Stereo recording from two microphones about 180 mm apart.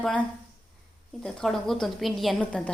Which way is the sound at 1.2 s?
5° left (ahead or behind).